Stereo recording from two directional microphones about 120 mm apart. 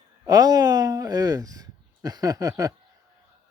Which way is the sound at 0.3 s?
30° right (ahead or behind).